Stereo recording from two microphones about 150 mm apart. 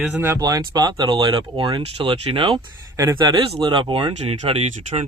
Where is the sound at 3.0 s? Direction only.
25° right (ahead or behind).